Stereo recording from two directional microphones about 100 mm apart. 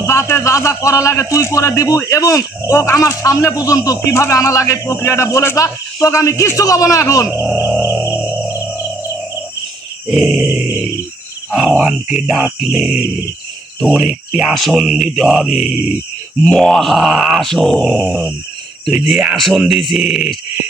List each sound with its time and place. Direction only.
0.0 s a man's voice: 25° left (ahead or behind)
7.8 s music: 20° right (ahead or behind)
10.1 s speech: 10° right (ahead or behind)
11.5 s groan: centre (ahead or behind)
11.8 s speech: 5° right (ahead or behind)
13.9 s groan: 10° right (ahead or behind)
18.9 s speech: 10° right (ahead or behind)
19.4 s groan: centre (ahead or behind)